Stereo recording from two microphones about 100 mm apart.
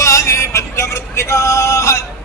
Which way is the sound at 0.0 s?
35° left (ahead or behind).